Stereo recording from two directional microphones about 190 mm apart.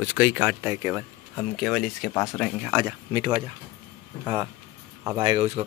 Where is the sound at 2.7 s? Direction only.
20° right (ahead or behind).